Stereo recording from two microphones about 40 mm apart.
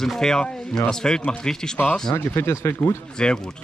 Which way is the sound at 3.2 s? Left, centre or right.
Centre.